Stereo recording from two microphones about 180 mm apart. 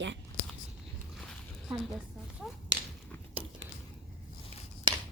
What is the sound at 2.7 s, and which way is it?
Whip, 90° right.